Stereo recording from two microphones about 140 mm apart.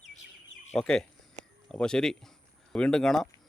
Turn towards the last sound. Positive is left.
turn(degrees=5)  # may be behind; listen again after turning